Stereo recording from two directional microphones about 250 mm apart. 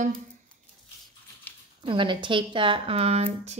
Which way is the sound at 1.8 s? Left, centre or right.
Centre.